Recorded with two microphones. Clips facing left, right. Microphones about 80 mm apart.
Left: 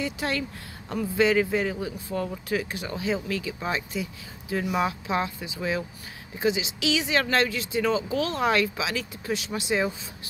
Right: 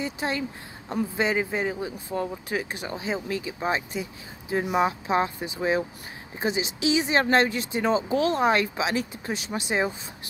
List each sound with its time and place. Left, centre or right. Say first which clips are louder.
0.0 s speech: even; right
2.7 s speech: left 1 dB; right